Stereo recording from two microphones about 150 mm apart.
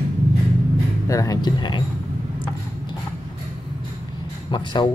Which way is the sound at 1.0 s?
20° left (ahead or behind).